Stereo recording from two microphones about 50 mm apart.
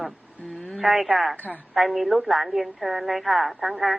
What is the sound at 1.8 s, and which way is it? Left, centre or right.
A woman's voice, centre.